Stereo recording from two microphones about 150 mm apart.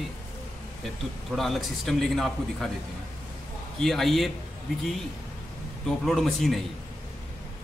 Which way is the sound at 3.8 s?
Centre (ahead or behind).